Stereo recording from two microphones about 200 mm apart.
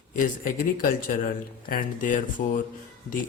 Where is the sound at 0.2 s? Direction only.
45° left (ahead or behind).